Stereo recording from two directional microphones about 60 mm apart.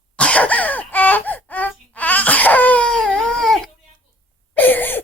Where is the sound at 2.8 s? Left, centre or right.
Centre.